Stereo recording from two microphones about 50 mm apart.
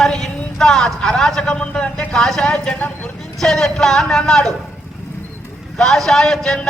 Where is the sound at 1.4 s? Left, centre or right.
Left.